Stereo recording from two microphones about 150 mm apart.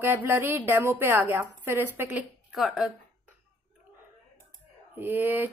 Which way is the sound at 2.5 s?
Centre (ahead or behind).